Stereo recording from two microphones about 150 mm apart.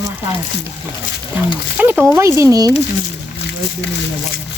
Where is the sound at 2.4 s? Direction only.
25° right (ahead or behind).